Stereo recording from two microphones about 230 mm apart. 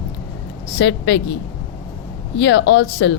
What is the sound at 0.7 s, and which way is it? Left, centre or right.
Speech, left.